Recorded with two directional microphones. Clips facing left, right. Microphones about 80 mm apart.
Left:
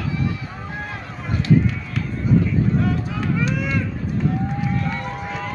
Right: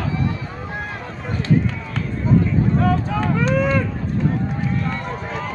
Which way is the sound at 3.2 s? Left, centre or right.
Right.